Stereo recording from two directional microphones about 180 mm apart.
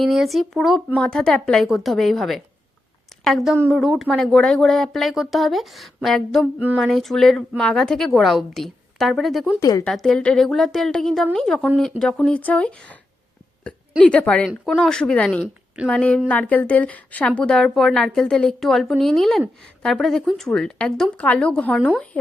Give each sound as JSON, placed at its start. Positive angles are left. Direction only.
{"t": 0.0, "sound": "a woman's voice", "side_deg": 0}
{"t": 9.6, "sound": "a woman's voice", "side_deg": 20}
{"t": 9.8, "sound": "a woman's voice", "side_deg": 0}
{"t": 14.0, "sound": "a woman's voice", "side_deg": 5}